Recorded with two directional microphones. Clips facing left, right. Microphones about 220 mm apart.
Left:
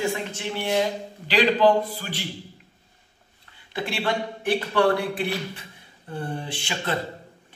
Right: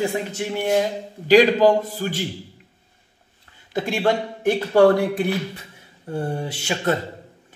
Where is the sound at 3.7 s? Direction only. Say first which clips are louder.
Right 6 dB; 45° right (ahead or behind).